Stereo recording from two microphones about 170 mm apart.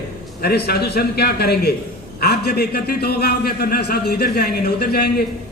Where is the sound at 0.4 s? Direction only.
70° left (ahead or behind).